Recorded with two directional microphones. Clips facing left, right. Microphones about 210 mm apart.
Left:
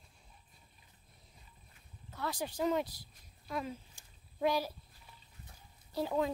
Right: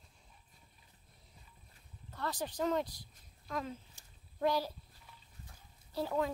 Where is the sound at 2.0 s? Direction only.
10° left (ahead or behind).